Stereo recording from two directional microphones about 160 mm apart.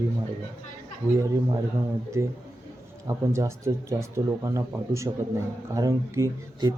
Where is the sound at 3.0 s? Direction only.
20° right (ahead or behind).